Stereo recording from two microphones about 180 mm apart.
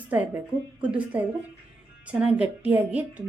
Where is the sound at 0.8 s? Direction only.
10° right (ahead or behind).